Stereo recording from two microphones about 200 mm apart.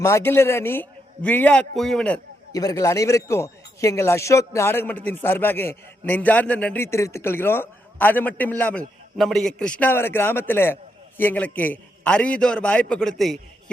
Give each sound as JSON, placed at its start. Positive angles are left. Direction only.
{"t": 0.0, "sound": "speech", "side_deg": 15}
{"t": 2.5, "sound": "a man's voice", "side_deg": 20}